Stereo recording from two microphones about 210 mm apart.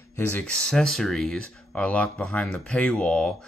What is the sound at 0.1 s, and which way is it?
Speech, 5° left (ahead or behind).